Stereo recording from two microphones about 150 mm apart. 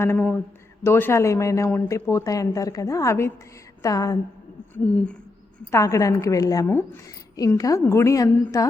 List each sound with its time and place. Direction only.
0.0 s a sound: 15° left (ahead or behind)
0.9 s a woman's voice: 15° left (ahead or behind)
4.7 s speech: 10° left (ahead or behind)
5.7 s a woman's voice: 20° left (ahead or behind)